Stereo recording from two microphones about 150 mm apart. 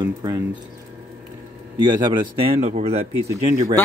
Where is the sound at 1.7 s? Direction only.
30° right (ahead or behind).